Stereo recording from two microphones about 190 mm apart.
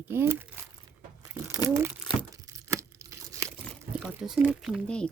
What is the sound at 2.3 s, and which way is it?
Tearing, 15° right (ahead or behind).